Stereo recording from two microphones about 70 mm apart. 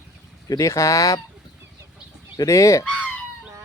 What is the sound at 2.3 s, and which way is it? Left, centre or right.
Speech, left.